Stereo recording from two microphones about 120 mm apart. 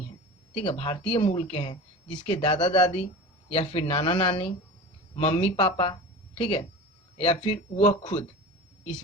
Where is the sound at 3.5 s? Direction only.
55° left (ahead or behind).